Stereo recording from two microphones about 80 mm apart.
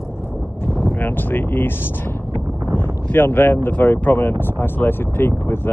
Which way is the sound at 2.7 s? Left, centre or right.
Left.